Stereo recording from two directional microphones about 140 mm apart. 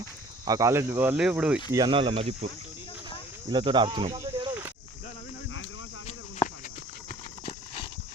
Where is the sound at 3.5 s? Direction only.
35° right (ahead or behind).